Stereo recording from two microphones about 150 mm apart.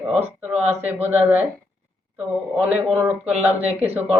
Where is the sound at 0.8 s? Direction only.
10° right (ahead or behind).